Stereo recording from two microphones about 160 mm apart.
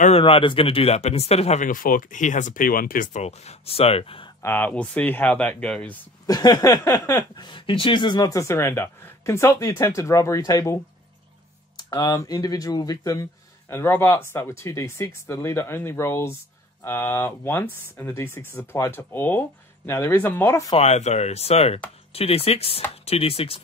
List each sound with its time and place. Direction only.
0.0 s speech: 35° left (ahead or behind)
4.4 s speech: 10° left (ahead or behind)
6.2 s speech: 25° left (ahead or behind)
7.3 s speech: 30° left (ahead or behind)
11.9 s speech: 25° left (ahead or behind)
20.7 s speech: 45° left (ahead or behind)